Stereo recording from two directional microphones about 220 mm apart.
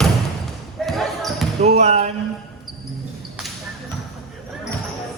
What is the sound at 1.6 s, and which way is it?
Speech, 30° right (ahead or behind).